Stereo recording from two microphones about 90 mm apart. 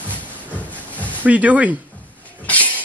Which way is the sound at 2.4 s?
15° left (ahead or behind).